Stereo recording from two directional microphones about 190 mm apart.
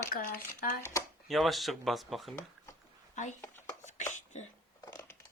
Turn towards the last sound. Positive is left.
turn(degrees=20)  # may be behind; listen again after turning